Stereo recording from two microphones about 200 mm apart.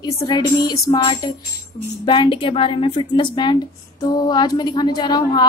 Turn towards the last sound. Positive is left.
turn(degrees=20)  # may be behind; listen again after turning